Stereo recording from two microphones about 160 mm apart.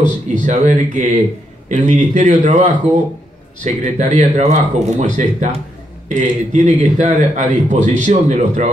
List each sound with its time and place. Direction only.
0.3 s a man's voice: 50° right (ahead or behind)